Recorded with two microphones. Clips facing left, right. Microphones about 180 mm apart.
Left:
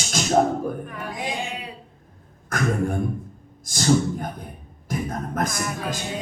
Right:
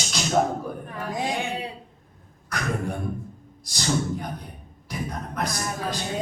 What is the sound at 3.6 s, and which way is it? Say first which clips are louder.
Speech: left 6 dB; 50° left (ahead or behind).